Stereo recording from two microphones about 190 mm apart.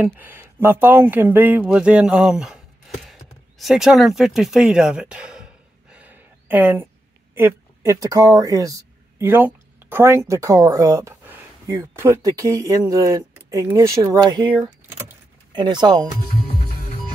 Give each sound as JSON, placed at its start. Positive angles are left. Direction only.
{"t": 0.0, "sound": "speech", "side_deg": -10}
{"t": 3.1, "sound": "a sound", "side_deg": 0}
{"t": 7.3, "sound": "speech", "side_deg": -15}
{"t": 14.5, "sound": "vehicle", "side_deg": -15}
{"t": 15.5, "sound": "speech", "side_deg": -25}